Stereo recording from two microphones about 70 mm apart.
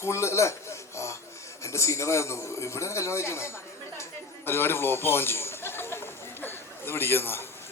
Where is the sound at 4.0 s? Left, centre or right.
Left.